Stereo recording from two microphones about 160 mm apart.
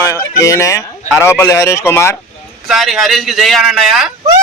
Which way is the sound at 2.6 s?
Centre (ahead or behind).